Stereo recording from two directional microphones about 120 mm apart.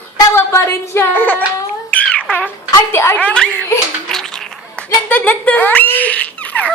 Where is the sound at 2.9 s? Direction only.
20° left (ahead or behind).